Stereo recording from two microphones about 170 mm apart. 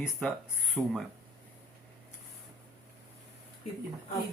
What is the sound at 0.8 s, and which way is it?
Speech, 10° right (ahead or behind).